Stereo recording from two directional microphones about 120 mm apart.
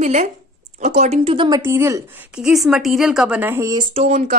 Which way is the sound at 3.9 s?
65° right (ahead or behind).